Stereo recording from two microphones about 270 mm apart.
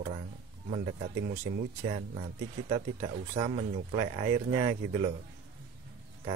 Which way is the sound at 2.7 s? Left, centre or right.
Right.